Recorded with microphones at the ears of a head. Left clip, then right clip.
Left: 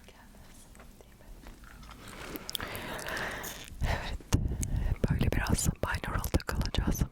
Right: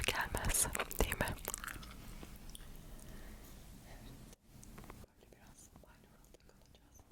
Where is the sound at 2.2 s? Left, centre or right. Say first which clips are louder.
Left 18 dB; left.